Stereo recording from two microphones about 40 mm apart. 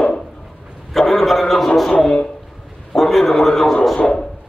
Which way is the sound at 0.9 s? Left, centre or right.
Centre.